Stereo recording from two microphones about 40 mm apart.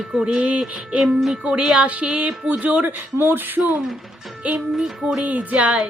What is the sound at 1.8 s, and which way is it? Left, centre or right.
Speech, right.